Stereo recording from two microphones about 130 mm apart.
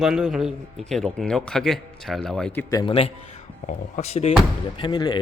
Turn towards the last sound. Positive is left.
turn(degrees=35)  # may be behind; listen again after turning